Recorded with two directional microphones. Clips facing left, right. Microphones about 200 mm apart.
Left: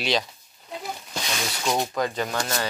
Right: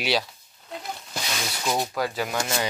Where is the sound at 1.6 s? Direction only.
Centre (ahead or behind).